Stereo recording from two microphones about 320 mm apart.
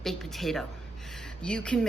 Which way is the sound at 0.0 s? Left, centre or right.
Centre.